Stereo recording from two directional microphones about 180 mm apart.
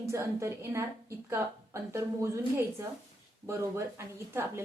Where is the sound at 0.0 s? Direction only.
15° right (ahead or behind).